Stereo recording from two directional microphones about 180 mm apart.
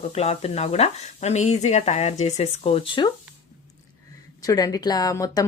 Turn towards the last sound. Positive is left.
turn(degrees=20)  # may be behind; listen again after turning